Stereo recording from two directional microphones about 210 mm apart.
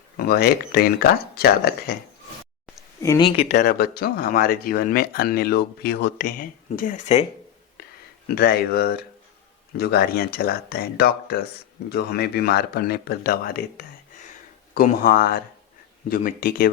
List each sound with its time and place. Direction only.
0.2 s speech: 45° left (ahead or behind)
3.0 s speech: 20° left (ahead or behind)
3.5 s speech: 50° left (ahead or behind)
8.4 s speech: 50° left (ahead or behind)